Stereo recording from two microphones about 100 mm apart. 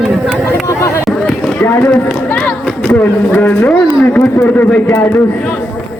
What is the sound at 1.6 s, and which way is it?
Run, 20° left (ahead or behind).